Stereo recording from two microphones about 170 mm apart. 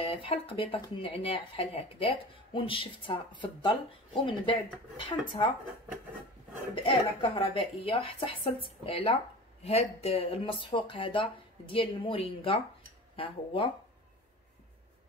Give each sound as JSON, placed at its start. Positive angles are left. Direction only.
{"t": 0.0, "sound": "speech", "side_deg": 35}
{"t": 6.7, "sound": "speech", "side_deg": 30}